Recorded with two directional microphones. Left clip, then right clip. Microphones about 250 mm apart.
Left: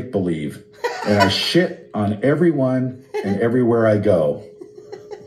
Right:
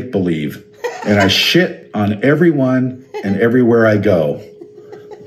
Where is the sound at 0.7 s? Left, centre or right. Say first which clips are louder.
Right 3 dB; centre.